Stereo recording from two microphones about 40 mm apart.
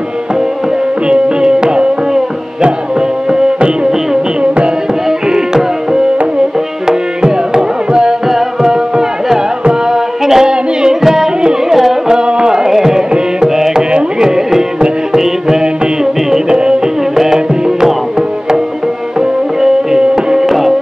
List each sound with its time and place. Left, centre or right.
1.0 s music: right
6.9 s tabla: centre
8.3 s music: centre
11.0 s carnatic music: centre
11.7 s music: centre
12.2 s music: right
13.1 s carnatic music: centre
13.9 s music: centre
19.6 s music: centre
20.4 s music: centre